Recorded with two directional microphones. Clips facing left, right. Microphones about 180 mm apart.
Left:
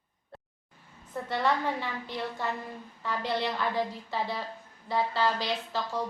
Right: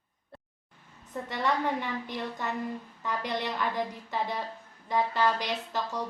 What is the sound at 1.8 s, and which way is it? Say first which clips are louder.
A woman's voice: right 1 dB; 15° right (ahead or behind).